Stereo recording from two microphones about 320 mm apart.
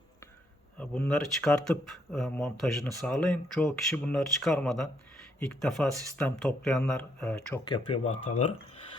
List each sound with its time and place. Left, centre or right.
0.8 s speech: centre
7.6 s speech: centre